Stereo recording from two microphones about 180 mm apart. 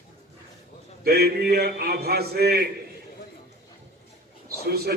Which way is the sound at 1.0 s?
60° right (ahead or behind).